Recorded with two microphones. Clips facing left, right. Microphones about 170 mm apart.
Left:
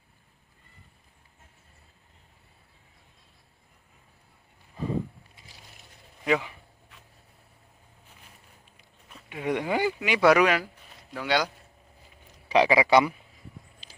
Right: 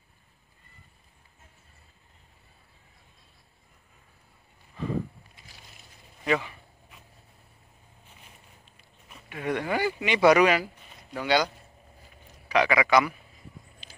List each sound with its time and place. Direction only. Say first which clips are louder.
6.2 s speech: left 1 dB; 10° left (ahead or behind)
9.3 s speech: left 1 dB; 15° left (ahead or behind)
9.9 s speech: right 1 dB; 5° left (ahead or behind)
12.4 s a man's voice: left 3 dB; 30° left (ahead or behind)